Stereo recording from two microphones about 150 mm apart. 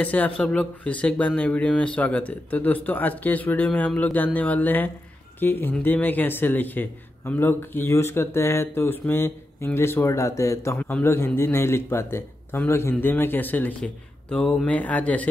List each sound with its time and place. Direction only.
0.0 s a man's voice: 10° left (ahead or behind)